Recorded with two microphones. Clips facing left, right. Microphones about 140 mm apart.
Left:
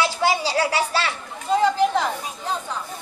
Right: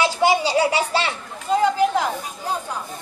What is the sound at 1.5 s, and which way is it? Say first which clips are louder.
Speech: right 1 dB; 5° right (ahead or behind).